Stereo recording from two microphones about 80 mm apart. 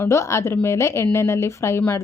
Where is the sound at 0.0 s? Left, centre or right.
Left.